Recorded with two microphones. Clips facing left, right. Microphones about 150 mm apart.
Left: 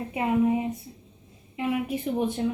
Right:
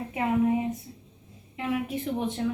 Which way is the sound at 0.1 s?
15° left (ahead or behind).